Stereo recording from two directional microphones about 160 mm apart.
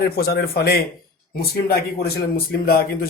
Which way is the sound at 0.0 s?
75° left (ahead or behind).